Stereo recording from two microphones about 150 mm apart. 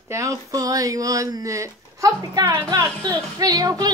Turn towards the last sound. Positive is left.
turn(degrees=-25)  # may be behind; listen again after turning